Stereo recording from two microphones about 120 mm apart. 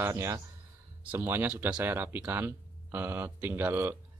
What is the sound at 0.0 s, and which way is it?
Speech, 20° right (ahead or behind).